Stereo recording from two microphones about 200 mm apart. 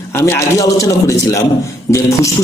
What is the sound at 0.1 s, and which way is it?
A man's voice, 15° left (ahead or behind).